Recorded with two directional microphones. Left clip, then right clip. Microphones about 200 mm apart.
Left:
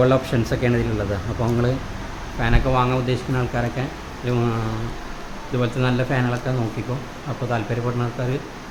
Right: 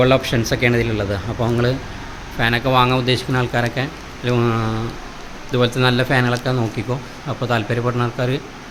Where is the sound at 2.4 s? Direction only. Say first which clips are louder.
Right 5 dB; 15° right (ahead or behind).